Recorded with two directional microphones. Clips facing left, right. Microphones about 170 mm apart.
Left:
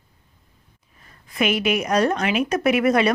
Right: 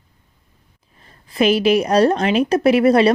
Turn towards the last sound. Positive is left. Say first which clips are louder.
# right 5 dB
turn(degrees=-30)  # may be behind; listen again after turning